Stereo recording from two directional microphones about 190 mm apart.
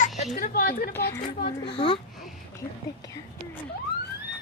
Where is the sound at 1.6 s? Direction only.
25° left (ahead or behind).